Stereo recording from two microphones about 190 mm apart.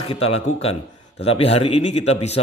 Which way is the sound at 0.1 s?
30° left (ahead or behind).